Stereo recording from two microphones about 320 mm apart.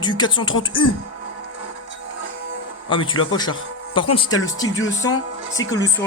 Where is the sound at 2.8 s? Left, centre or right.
Centre.